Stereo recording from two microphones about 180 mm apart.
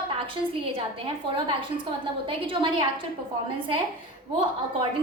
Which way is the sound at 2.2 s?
30° right (ahead or behind).